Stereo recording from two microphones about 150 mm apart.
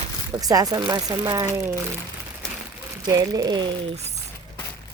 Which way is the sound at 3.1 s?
25° right (ahead or behind).